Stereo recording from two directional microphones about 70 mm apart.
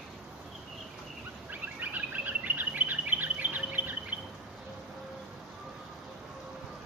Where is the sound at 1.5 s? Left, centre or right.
Right.